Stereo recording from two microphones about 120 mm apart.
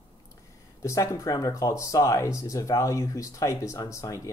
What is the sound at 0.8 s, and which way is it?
Speech, 25° left (ahead or behind).